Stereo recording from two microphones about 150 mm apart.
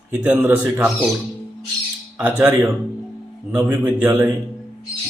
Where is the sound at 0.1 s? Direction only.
10° right (ahead or behind).